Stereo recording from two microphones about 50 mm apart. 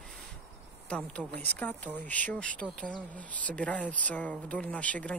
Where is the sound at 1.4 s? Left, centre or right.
Left.